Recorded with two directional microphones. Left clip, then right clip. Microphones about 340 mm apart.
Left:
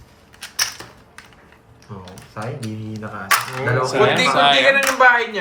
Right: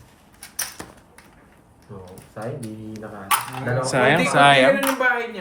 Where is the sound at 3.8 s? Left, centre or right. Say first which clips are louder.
Left 2 dB; right.